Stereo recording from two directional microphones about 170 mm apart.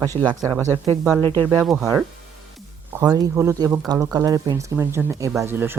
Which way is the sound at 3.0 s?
15° right (ahead or behind).